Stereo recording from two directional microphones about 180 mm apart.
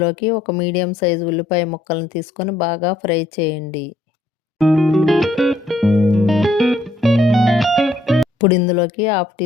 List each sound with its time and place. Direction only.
0.0 s speech: 30° left (ahead or behind)
4.5 s music: centre (ahead or behind)
8.4 s speech: 30° left (ahead or behind)